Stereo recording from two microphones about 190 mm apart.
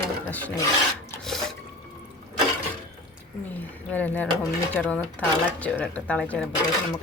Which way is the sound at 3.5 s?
10° left (ahead or behind).